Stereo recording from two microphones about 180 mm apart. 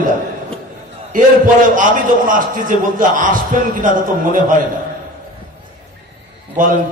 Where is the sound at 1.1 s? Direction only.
50° right (ahead or behind).